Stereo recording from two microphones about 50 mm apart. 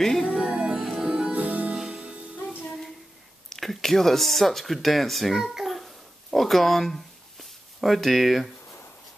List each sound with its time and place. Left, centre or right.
0.0 s music: centre
0.3 s music: centre
1.3 s music: right
1.8 s music: centre
2.6 s child singing: centre
3.4 s a sound: centre